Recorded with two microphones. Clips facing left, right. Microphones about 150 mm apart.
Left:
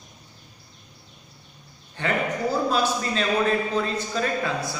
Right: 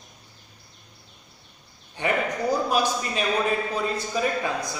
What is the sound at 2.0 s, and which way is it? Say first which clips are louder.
A man's voice: even; 15° right (ahead or behind).